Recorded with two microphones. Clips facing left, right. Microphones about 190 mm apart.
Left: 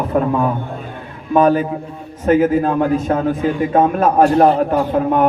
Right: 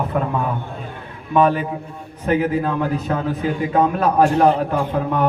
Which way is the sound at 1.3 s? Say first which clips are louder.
Left 4 dB; 40° left (ahead or behind).